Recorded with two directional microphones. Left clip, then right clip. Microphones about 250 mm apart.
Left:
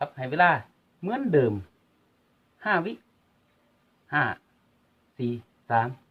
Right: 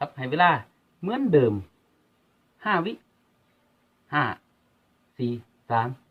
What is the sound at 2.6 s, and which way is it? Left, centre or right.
Speech, centre.